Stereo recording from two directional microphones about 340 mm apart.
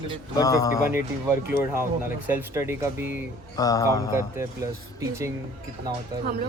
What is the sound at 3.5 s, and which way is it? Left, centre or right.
Mantra, centre.